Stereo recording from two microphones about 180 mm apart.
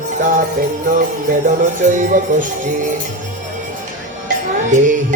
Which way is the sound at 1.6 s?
45° right (ahead or behind).